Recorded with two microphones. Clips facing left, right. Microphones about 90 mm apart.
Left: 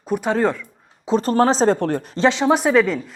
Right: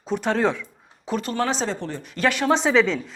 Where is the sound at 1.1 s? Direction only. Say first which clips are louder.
Left 8 dB; 40° left (ahead or behind).